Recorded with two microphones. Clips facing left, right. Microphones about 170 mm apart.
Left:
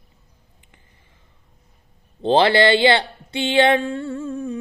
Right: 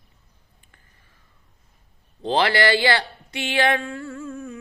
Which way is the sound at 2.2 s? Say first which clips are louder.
Left 5 dB; 30° left (ahead or behind).